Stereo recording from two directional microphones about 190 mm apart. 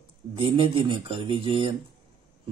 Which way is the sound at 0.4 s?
25° right (ahead or behind).